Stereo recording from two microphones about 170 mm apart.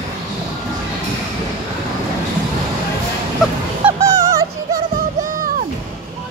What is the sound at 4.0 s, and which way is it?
Music, 20° right (ahead or behind).